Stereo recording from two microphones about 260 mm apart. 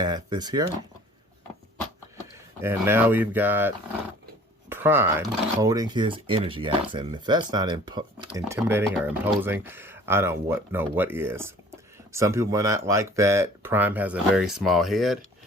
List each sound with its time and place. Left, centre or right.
0.0 s speech: centre
2.6 s speech: centre
4.7 s speech: centre